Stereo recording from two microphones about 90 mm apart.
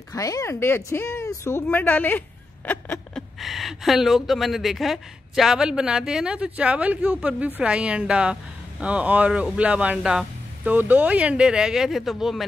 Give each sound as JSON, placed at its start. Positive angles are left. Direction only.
{"t": 0.1, "sound": "speech", "side_deg": 40}
{"t": 3.2, "sound": "a woman's voice", "side_deg": 0}